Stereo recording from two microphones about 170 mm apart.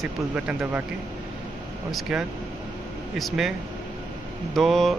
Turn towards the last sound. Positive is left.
turn(degrees=0)  # may be behind; listen again after turning